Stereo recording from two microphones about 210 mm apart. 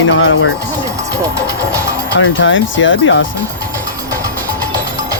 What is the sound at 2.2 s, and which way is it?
Speech, 65° left (ahead or behind).